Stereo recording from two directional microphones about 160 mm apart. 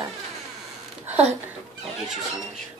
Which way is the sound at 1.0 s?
10° right (ahead or behind).